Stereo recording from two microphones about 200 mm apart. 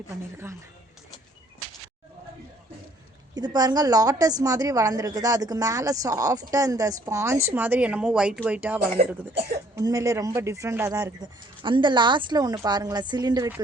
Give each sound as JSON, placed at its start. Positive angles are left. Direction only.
{"t": 3.3, "sound": "a woman's voice", "side_deg": -20}